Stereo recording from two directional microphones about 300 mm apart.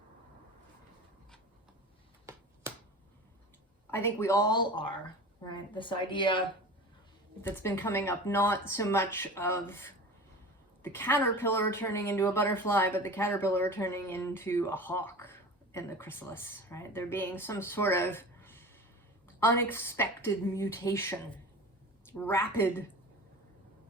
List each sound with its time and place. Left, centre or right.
3.9 s a woman's voice: centre
7.4 s a woman's voice: centre